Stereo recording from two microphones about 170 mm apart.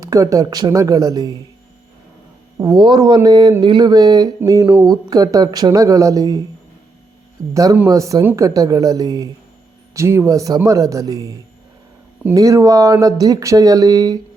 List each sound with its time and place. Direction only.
0.0 s speech: 20° right (ahead or behind)
2.6 s speech: 25° right (ahead or behind)
7.5 s speech: 20° right (ahead or behind)